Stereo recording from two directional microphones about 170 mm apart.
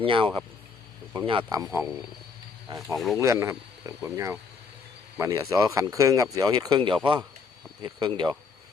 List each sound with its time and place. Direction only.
0.0 s speech: 30° right (ahead or behind)
2.7 s speech: centre (ahead or behind)
3.2 s speech: 20° right (ahead or behind)